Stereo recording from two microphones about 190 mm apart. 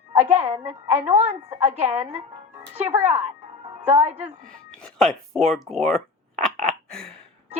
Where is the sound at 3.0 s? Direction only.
35° right (ahead or behind).